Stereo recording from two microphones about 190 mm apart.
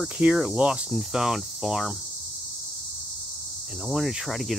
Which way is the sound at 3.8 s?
Centre (ahead or behind).